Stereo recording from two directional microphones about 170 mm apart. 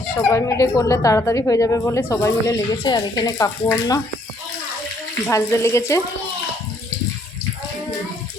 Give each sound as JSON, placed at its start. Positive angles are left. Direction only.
{"t": 0.3, "sound": "a woman's voice", "side_deg": 20}
{"t": 5.3, "sound": "a woman's voice", "side_deg": 15}